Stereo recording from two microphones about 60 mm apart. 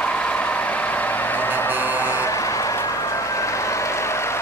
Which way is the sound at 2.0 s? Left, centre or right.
Left.